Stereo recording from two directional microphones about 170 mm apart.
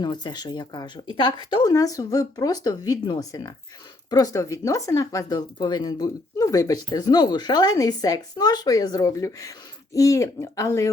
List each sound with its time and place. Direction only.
0.0 s speech: 25° left (ahead or behind)